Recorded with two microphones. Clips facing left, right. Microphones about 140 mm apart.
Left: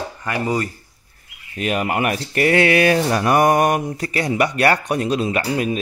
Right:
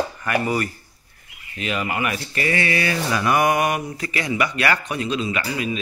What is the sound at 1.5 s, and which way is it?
Speech, 50° left (ahead or behind).